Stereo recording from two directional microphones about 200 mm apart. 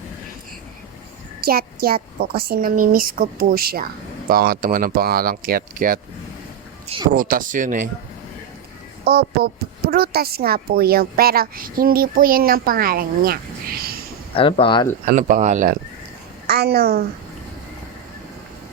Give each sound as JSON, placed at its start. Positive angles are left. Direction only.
{"t": 1.4, "sound": "a woman's voice", "side_deg": -50}
{"t": 6.8, "sound": "speech", "side_deg": -25}
{"t": 7.1, "sound": "speech", "side_deg": -45}
{"t": 9.0, "sound": "a woman's voice", "side_deg": -50}
{"t": 14.3, "sound": "speech", "side_deg": 25}
{"t": 15.0, "sound": "speech", "side_deg": -40}
{"t": 16.5, "sound": "a woman's voice", "side_deg": -50}